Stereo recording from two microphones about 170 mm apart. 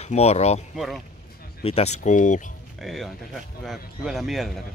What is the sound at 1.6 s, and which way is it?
Speech, 35° left (ahead or behind).